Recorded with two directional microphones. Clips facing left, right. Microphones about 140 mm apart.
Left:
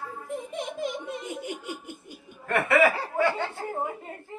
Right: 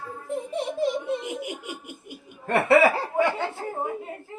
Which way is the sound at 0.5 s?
35° right (ahead or behind).